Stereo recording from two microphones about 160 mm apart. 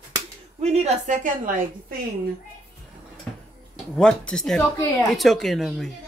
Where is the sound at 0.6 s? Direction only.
45° right (ahead or behind).